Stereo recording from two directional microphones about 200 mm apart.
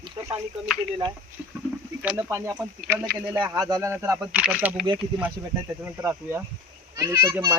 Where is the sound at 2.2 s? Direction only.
15° right (ahead or behind).